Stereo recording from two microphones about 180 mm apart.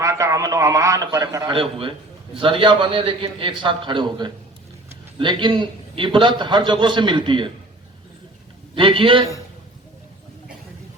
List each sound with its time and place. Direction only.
0.0 s a man's voice: 15° right (ahead or behind)
8.7 s a man's voice: 30° right (ahead or behind)